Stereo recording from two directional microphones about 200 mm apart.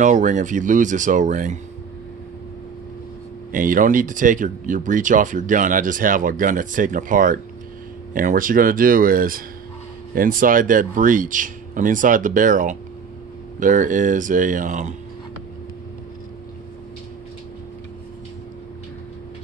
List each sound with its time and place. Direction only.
0.0 s speech: 40° right (ahead or behind)
3.5 s speech: 45° right (ahead or behind)